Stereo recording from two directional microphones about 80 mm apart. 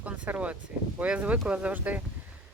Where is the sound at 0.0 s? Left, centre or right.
Centre.